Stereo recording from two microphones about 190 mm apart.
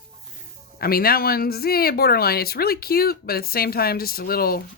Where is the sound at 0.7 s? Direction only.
50° left (ahead or behind).